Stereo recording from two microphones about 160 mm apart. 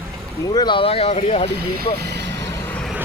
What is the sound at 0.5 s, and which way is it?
Speech, 30° left (ahead or behind).